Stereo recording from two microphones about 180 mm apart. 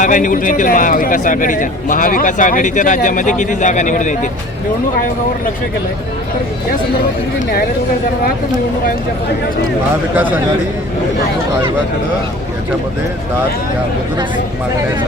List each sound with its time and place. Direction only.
0.0 s a man's voice: 45° left (ahead or behind)
10.2 s a man's voice: 10° right (ahead or behind)